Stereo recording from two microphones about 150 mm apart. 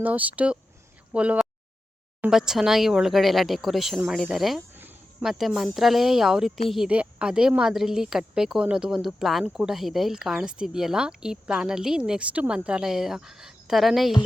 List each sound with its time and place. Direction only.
0.0 s speech: 10° right (ahead or behind)
4.7 s a sound: 15° right (ahead or behind)
5.2 s speech: centre (ahead or behind)